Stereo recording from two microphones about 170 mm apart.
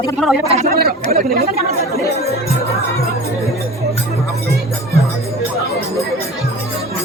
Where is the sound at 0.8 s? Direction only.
65° right (ahead or behind).